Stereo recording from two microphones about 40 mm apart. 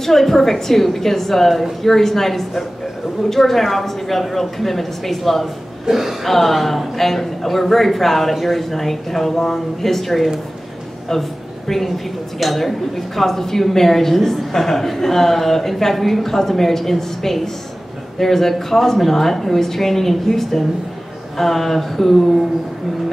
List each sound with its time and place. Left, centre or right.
0.0 s a woman's voice: centre
6.2 s a man's voice: centre